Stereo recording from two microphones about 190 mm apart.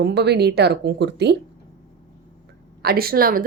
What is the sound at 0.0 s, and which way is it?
Speech, 60° right (ahead or behind).